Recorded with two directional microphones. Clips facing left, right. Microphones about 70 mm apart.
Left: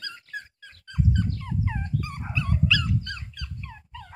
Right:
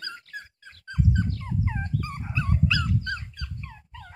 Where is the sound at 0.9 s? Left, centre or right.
Right.